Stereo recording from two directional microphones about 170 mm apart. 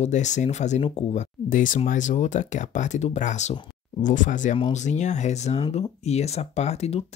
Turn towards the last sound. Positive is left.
turn(degrees=40)  # may be behind; listen again after turning